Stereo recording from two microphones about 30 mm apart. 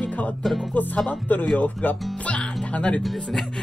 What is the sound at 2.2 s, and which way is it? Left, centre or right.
Speech, left.